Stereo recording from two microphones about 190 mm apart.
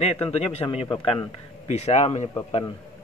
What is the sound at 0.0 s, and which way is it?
Speech, 30° left (ahead or behind).